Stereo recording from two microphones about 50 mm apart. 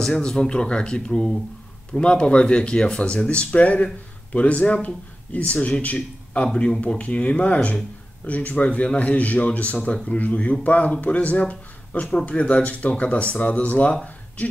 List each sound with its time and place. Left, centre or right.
0.0 s speech: centre; by 6.4 s left
6.4 s speech: centre